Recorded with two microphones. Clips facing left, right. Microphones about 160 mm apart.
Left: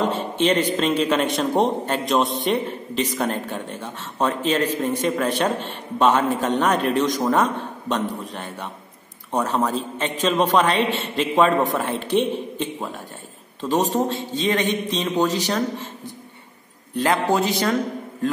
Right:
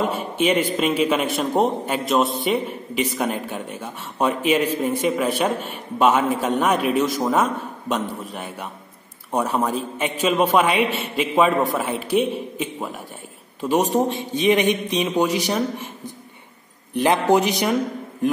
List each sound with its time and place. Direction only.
0.0 s a man's voice: 10° right (ahead or behind)
16.9 s a man's voice: 20° right (ahead or behind)